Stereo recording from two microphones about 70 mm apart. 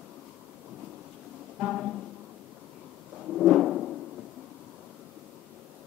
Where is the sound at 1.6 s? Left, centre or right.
Centre.